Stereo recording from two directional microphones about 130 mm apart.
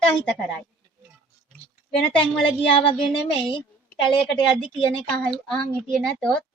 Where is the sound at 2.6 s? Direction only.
45° left (ahead or behind).